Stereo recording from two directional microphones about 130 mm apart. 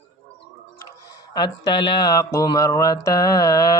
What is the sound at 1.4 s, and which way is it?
A man's voice, 35° left (ahead or behind).